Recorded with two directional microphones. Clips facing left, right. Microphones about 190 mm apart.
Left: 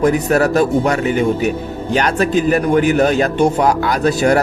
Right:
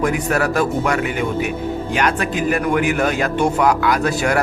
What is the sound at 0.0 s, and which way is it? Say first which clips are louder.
A man's voice: left 5 dB; 35° left (ahead or behind).